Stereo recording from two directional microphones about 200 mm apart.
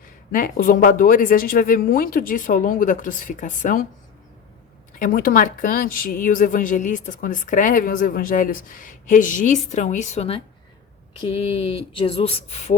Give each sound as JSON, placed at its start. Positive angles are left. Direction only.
{"t": 0.3, "sound": "speech", "side_deg": 45}
{"t": 4.9, "sound": "a woman's voice", "side_deg": 45}